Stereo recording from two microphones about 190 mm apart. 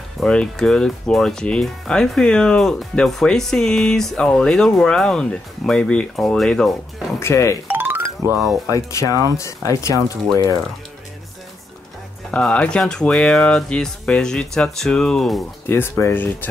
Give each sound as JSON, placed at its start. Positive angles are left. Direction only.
{"t": 0.2, "sound": "speech", "side_deg": 5}
{"t": 7.2, "sound": "speech", "side_deg": 15}
{"t": 7.6, "sound": "music", "side_deg": -10}
{"t": 8.6, "sound": "speech", "side_deg": 20}
{"t": 12.3, "sound": "speech", "side_deg": 5}
{"t": 15.7, "sound": "speech", "side_deg": 15}